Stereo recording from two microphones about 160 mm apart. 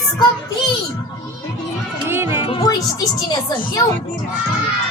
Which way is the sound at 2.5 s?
35° left (ahead or behind).